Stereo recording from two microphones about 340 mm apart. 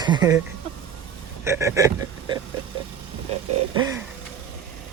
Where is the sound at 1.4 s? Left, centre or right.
Centre.